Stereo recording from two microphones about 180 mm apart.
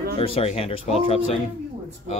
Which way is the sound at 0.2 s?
35° left (ahead or behind).